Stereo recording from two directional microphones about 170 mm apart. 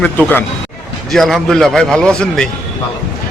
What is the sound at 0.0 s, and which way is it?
A man's voice, 10° left (ahead or behind).